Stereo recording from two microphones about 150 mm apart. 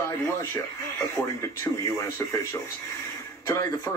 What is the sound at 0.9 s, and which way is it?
A woman's voice, 20° left (ahead or behind).